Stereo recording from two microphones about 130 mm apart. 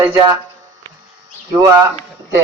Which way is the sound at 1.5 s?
25° right (ahead or behind).